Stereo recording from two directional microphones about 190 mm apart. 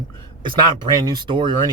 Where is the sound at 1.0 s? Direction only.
20° right (ahead or behind).